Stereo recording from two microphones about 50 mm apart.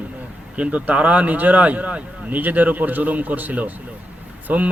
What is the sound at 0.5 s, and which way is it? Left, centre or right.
A man's voice, right.